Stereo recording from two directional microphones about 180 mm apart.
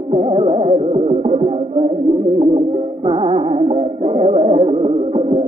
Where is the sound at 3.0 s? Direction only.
30° right (ahead or behind).